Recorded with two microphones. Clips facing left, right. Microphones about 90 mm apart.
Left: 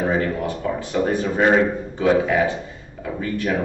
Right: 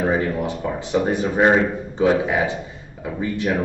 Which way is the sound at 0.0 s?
15° right (ahead or behind).